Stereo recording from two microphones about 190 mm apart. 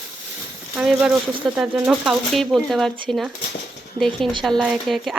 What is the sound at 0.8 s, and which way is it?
Speech, 5° right (ahead or behind).